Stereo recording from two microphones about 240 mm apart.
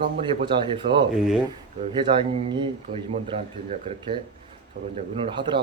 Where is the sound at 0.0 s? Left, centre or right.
Right.